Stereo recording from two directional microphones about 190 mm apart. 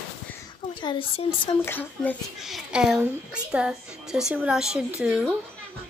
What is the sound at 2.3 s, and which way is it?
A woman's voice, centre (ahead or behind).